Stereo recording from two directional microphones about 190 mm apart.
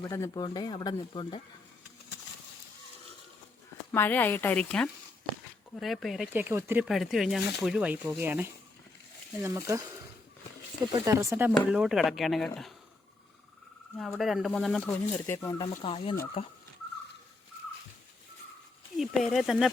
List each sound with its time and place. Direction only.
0.0 s speech: 15° left (ahead or behind)
3.9 s a woman's voice: 10° left (ahead or behind); by 6.8 s 15° right (ahead or behind)
6.8 s speech: centre (ahead or behind)
10.9 s speech: 15° right (ahead or behind)
11.7 s speech: centre (ahead or behind)
14.0 s speech: centre (ahead or behind)
15.7 s speech: 30° left (ahead or behind)
18.9 s speech: centre (ahead or behind)